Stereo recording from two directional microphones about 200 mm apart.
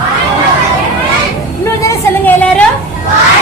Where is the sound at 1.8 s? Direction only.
10° left (ahead or behind).